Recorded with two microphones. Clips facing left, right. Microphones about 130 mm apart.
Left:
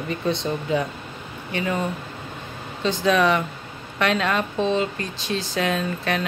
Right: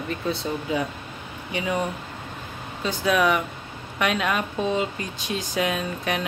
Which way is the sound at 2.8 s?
10° right (ahead or behind).